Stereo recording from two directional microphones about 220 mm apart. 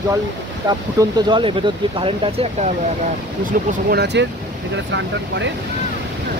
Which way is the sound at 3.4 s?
40° right (ahead or behind).